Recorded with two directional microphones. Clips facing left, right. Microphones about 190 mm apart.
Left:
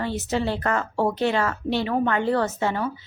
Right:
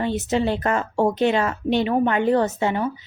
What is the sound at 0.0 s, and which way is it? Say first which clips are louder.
A woman's voice: right 3 dB; 20° right (ahead or behind).